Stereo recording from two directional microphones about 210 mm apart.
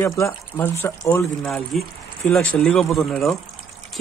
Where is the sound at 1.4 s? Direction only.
Centre (ahead or behind).